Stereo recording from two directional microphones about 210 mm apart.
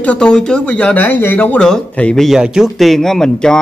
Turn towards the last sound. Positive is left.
turn(degrees=5)  # may be behind; listen again after turning